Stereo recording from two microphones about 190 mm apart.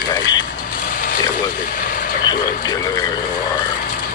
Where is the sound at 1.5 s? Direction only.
45° left (ahead or behind).